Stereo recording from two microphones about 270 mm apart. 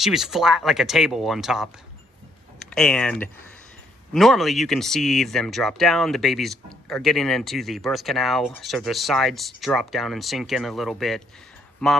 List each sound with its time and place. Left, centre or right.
0.0 s speech: centre